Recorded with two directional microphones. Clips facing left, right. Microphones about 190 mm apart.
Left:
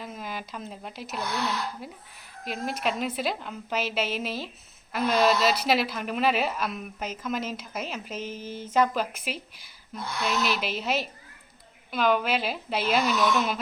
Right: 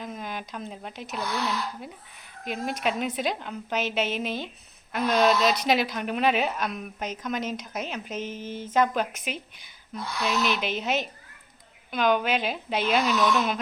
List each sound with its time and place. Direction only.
0.0 s a woman's voice: 5° left (ahead or behind)
8.3 s a sound: 40° left (ahead or behind)
8.7 s a woman's voice: centre (ahead or behind)